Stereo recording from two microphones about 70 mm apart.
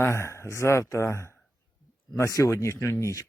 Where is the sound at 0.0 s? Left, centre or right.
Left.